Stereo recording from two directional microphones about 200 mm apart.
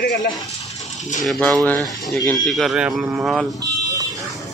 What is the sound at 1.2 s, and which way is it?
Speech, centre (ahead or behind).